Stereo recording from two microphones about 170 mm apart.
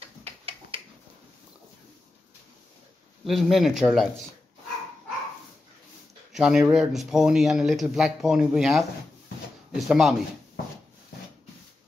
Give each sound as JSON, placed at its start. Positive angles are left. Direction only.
{"t": 0.2, "sound": "a sound", "side_deg": -35}
{"t": 3.3, "sound": "speech", "side_deg": 0}
{"t": 6.3, "sound": "speech", "side_deg": -5}